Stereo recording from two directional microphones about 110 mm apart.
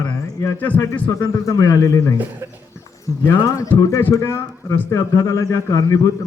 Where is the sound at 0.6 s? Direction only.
15° left (ahead or behind).